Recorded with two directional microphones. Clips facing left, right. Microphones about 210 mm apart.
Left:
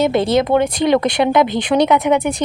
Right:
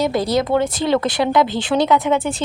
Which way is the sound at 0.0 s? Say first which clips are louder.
Left 3 dB; 25° left (ahead or behind).